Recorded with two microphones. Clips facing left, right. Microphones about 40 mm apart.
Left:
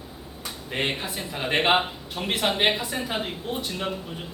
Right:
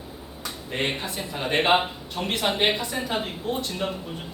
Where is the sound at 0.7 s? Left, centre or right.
Centre.